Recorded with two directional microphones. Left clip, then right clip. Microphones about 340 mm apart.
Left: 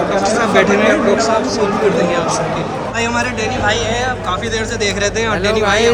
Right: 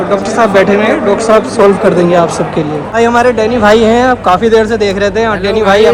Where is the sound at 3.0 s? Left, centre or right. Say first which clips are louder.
Right 11 dB; centre.